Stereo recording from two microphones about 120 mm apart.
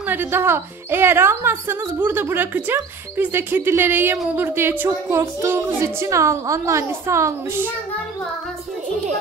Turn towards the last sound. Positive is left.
turn(degrees=-25)  # may be behind; listen again after turning